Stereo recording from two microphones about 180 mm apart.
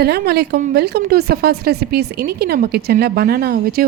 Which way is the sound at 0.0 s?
65° right (ahead or behind).